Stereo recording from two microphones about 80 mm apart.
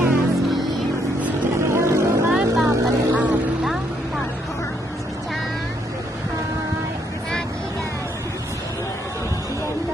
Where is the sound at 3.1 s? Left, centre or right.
Centre.